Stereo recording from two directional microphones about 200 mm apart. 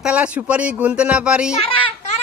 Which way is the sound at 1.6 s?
25° left (ahead or behind).